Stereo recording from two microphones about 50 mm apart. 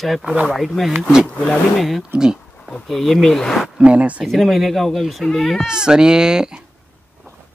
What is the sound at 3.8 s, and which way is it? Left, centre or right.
Speech, right.